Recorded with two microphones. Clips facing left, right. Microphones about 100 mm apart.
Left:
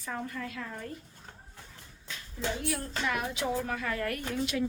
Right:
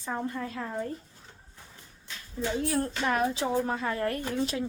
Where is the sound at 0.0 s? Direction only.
25° right (ahead or behind).